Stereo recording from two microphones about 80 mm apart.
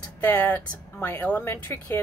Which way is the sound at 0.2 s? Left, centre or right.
Left.